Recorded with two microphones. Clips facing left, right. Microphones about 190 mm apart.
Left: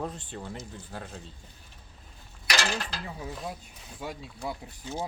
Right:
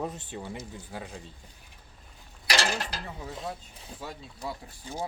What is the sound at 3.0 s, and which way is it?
Speech, 10° left (ahead or behind).